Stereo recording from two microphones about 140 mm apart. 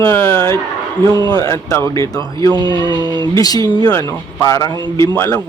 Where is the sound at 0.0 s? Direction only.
15° left (ahead or behind).